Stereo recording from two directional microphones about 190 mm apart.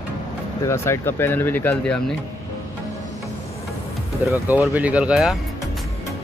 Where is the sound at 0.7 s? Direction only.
10° left (ahead or behind).